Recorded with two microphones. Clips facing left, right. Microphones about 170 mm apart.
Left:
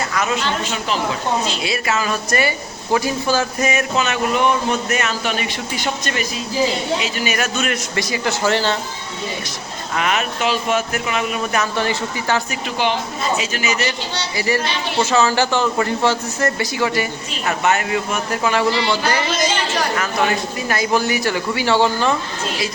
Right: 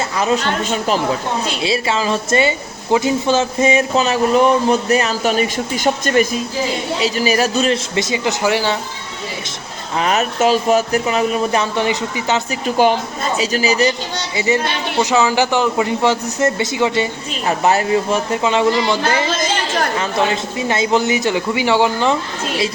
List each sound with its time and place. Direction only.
0.1 s speech: 30° right (ahead or behind)
0.4 s a woman's voice: 50° right (ahead or behind)
1.6 s speech: 30° right (ahead or behind); by 6.2 s 45° right (ahead or behind)
7.0 s a man's voice: 35° right (ahead or behind); by 8.8 s 10° right (ahead or behind)
9.9 s speech: 35° right (ahead or behind)
11.8 s speech: 15° right (ahead or behind)
12.6 s a woman's voice: 45° right (ahead or behind)
14.3 s a man's voice: 20° right (ahead or behind)